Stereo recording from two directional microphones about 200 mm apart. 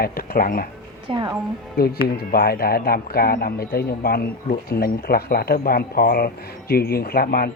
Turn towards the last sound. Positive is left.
turn(degrees=50)  # may be behind; listen again after turning